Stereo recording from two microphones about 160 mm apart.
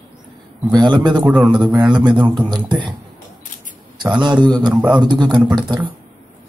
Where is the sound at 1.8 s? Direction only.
30° right (ahead or behind).